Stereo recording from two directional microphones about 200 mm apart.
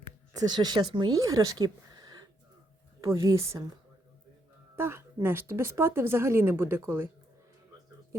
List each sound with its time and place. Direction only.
0.3 s speech: 20° right (ahead or behind)
4.8 s speech: 10° right (ahead or behind)